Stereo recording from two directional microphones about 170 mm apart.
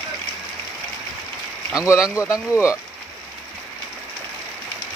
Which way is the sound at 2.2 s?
15° left (ahead or behind).